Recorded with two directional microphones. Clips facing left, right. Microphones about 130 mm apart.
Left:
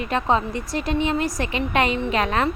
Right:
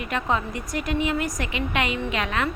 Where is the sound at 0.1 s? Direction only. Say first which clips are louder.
Left 4 dB; 30° left (ahead or behind).